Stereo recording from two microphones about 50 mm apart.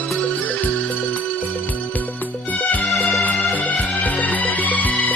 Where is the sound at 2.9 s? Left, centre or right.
Centre.